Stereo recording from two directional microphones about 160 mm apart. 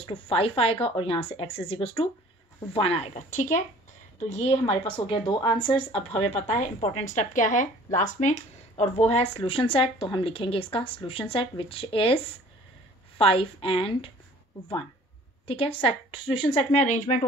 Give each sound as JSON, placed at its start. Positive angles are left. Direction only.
{"t": 0.0, "sound": "a woman's voice", "side_deg": 35}
{"t": 13.2, "sound": "a woman's voice", "side_deg": 35}
{"t": 15.4, "sound": "a woman's voice", "side_deg": 35}